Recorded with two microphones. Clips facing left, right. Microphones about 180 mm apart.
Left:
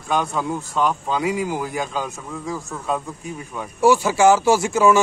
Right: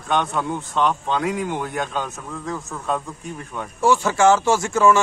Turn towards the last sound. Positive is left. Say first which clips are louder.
# left 1 dB
turn(degrees=10)  # may be behind; listen again after turning